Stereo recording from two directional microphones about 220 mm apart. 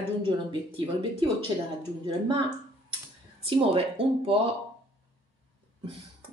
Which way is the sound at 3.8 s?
25° right (ahead or behind).